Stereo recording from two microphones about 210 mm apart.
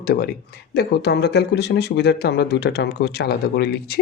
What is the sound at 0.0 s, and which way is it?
Speech, 45° left (ahead or behind).